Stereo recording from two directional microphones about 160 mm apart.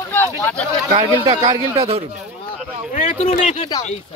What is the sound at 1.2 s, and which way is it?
Speech, 35° right (ahead or behind).